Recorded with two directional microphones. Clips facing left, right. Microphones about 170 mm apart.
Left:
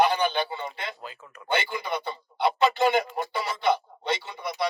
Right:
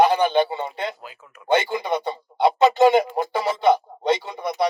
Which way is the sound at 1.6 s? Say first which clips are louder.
Right 7 dB; 25° right (ahead or behind).